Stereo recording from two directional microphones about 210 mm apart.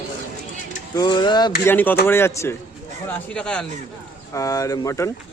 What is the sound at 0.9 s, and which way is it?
Speech, 20° left (ahead or behind).